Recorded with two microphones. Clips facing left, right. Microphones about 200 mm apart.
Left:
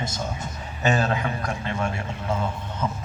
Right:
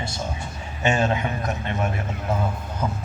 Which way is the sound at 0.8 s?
35° left (ahead or behind).